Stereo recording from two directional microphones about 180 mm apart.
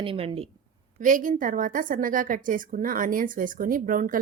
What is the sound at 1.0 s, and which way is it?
A woman's voice, 45° right (ahead or behind).